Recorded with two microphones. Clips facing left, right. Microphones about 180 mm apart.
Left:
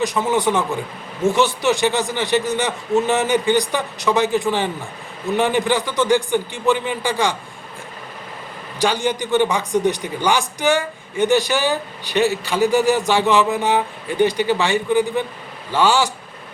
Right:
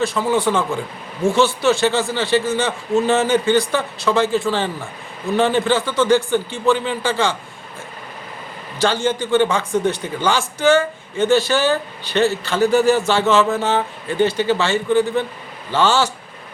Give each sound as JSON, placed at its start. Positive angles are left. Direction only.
{"t": 0.0, "sound": "a man's voice", "side_deg": 20}
{"t": 8.8, "sound": "a man's voice", "side_deg": 15}